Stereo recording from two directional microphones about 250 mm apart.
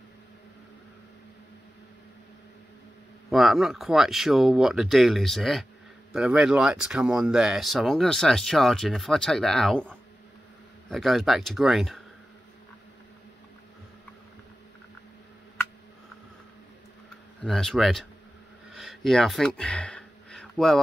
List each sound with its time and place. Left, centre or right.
3.3 s speech: centre
17.4 s speech: centre
18.7 s a sound: centre